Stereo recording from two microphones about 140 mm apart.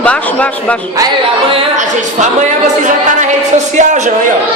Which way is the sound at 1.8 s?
60° right (ahead or behind).